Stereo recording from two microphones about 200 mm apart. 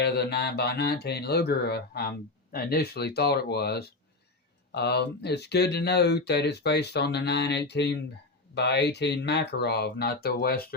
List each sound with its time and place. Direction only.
0.0 s speech: 55° left (ahead or behind)